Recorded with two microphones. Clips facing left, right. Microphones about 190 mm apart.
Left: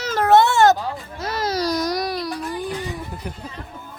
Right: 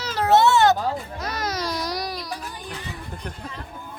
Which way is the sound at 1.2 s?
30° left (ahead or behind).